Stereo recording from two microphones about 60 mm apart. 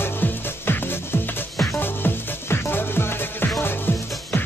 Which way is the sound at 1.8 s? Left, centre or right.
Left.